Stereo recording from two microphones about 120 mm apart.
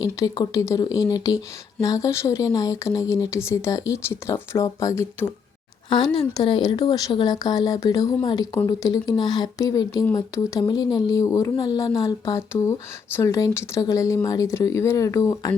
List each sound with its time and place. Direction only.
0.5 s speech: 25° left (ahead or behind)
6.3 s speech: 35° left (ahead or behind)
10.6 s speech: 35° left (ahead or behind)